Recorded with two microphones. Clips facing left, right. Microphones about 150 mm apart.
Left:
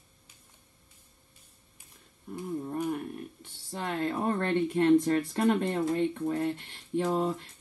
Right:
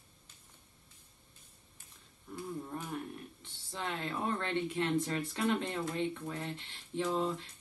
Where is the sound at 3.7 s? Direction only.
50° left (ahead or behind).